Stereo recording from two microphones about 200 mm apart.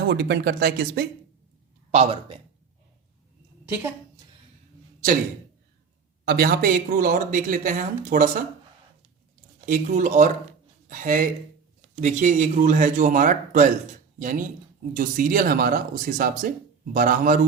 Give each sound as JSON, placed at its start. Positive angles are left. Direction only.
{"t": 0.0, "sound": "speech", "side_deg": -55}
{"t": 1.9, "sound": "speech", "side_deg": -30}
{"t": 6.2, "sound": "speech", "side_deg": -50}
{"t": 9.6, "sound": "speech", "side_deg": -40}